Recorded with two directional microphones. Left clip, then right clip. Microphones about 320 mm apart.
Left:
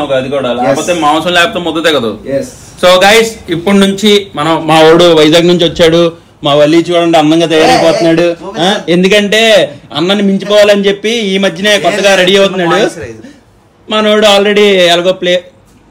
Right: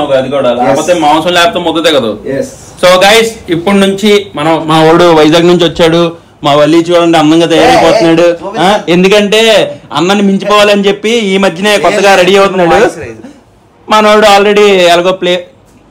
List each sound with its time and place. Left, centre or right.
0.1 s a man's voice: centre
13.9 s a man's voice: centre
14.3 s a man's voice: centre